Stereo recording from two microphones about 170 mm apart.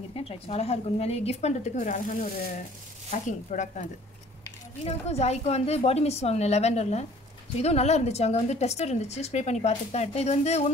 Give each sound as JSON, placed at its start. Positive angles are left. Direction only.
{"t": 0.1, "sound": "speech", "side_deg": 35}
{"t": 4.8, "sound": "speech", "side_deg": 40}